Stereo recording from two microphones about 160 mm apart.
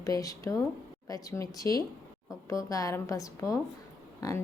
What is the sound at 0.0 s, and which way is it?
A woman's voice, 20° left (ahead or behind).